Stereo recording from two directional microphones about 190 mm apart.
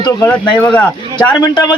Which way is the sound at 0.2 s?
10° left (ahead or behind).